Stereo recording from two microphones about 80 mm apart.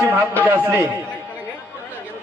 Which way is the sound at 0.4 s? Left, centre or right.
Right.